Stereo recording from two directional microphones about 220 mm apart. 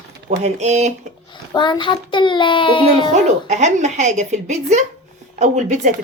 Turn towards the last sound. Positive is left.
turn(degrees=-35)  # may be behind; listen again after turning